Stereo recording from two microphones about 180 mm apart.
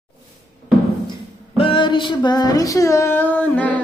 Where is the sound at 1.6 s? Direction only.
30° left (ahead or behind).